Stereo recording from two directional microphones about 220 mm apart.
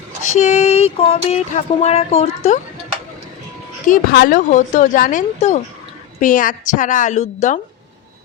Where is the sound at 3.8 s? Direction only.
40° left (ahead or behind).